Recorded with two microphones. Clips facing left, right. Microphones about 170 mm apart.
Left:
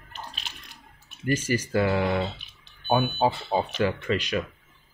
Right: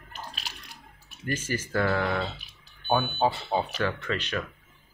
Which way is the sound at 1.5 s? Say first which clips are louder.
Left 2 dB; 15° left (ahead or behind).